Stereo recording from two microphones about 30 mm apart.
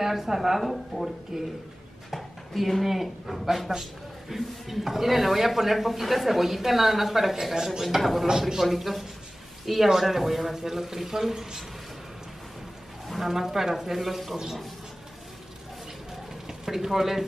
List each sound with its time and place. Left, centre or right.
0.0 s a woman's voice: centre
8.3 s speech: centre
8.5 s a woman's voice: centre
13.2 s a woman's voice: centre
16.4 s speech: centre